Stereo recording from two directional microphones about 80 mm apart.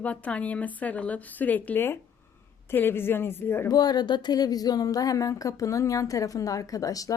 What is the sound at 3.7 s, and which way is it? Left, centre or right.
A woman's voice, left.